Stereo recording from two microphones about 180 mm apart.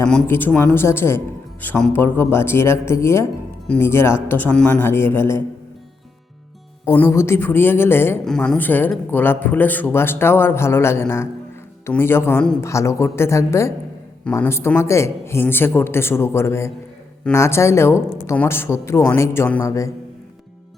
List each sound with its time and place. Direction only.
0.1 s a man's voice: 10° left (ahead or behind)
6.9 s a man's voice: 15° left (ahead or behind)